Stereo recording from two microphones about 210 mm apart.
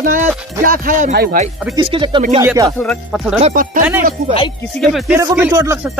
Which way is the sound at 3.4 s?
35° right (ahead or behind).